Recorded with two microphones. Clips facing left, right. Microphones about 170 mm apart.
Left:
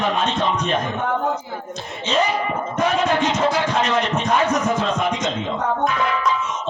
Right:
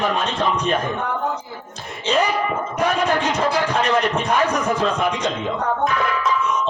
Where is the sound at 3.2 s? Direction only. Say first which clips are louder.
Left 1 dB; 30° right (ahead or behind).